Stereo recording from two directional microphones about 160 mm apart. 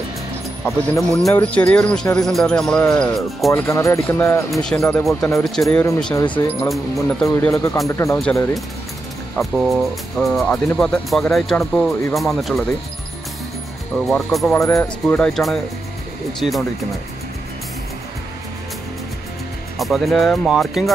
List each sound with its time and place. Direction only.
1.4 s speech: 10° left (ahead or behind)
3.5 s speech: 15° left (ahead or behind)
4.5 s speech: 5° left (ahead or behind)
7.5 s speech: 20° left (ahead or behind)
8.2 s speech: 5° left (ahead or behind)
13.9 s speech: 5° left (ahead or behind)
14.5 s speech: 15° left (ahead or behind); by 16.6 s centre (ahead or behind)
19.8 s speech: centre (ahead or behind)